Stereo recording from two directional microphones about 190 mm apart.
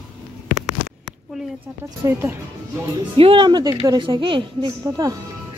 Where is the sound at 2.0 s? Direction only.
15° right (ahead or behind).